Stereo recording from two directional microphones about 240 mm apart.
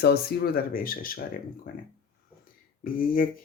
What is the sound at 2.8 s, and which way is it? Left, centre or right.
Speech, left.